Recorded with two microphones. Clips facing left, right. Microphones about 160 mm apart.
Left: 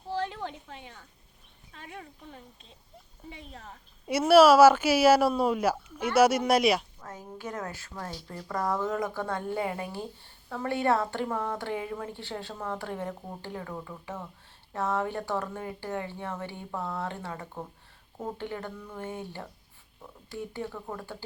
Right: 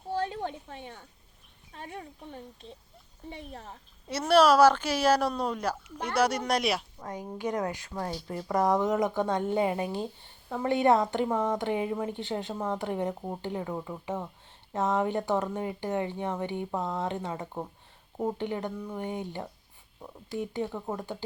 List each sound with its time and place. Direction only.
0.3 s a sound: 40° right (ahead or behind)
1.7 s speech: 40° right (ahead or behind)
4.0 s speech: 10° left (ahead or behind)
7.0 s a woman's voice: 15° right (ahead or behind)